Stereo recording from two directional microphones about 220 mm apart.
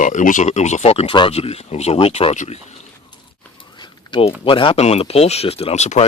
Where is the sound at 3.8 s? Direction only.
20° left (ahead or behind).